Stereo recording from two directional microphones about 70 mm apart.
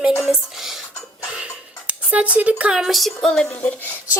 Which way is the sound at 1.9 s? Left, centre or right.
Centre.